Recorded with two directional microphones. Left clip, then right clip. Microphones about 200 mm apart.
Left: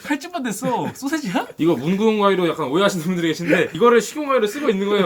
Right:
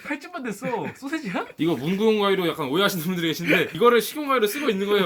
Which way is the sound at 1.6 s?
30° right (ahead or behind).